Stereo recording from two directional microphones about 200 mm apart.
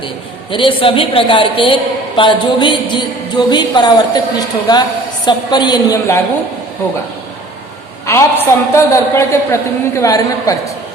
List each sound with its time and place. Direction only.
0.5 s a man's voice: 25° left (ahead or behind)
8.0 s a woman's voice: 15° left (ahead or behind)